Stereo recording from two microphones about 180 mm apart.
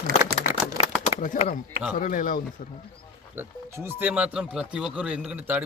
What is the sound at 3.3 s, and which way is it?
A man's voice, 15° right (ahead or behind).